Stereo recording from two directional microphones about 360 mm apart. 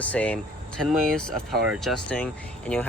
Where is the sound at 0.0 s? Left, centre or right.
Centre.